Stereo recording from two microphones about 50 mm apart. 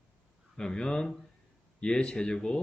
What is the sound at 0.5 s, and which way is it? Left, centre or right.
A man's voice, centre.